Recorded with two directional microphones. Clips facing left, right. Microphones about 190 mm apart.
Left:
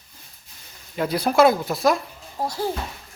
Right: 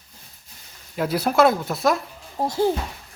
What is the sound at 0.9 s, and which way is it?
Speech, 5° right (ahead or behind).